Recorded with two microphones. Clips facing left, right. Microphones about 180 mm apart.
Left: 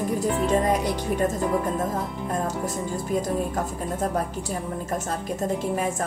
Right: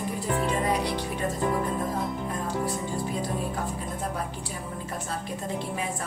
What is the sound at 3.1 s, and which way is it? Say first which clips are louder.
A woman's voice: left 5 dB; 45° left (ahead or behind).